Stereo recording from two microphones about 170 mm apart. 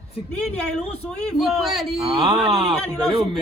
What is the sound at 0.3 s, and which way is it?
Speech, 5° left (ahead or behind).